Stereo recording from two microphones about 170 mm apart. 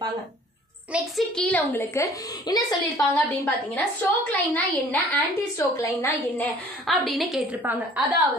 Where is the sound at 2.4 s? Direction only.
25° left (ahead or behind).